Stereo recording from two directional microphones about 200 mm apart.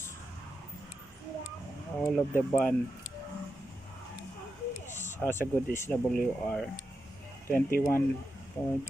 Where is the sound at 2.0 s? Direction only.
5° left (ahead or behind).